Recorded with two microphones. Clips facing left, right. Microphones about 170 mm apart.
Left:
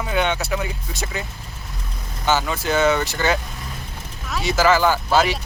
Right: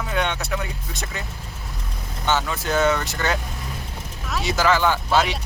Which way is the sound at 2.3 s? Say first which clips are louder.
Left 2 dB; centre (ahead or behind).